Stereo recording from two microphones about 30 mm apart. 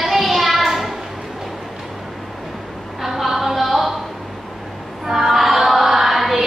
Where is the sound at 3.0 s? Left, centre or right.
Centre.